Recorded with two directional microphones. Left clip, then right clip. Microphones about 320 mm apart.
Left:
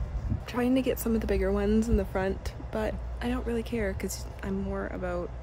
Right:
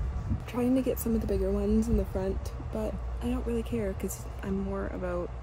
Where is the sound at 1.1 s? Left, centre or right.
Centre.